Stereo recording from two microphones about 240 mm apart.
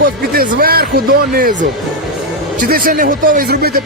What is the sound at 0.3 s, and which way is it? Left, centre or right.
Speech, right.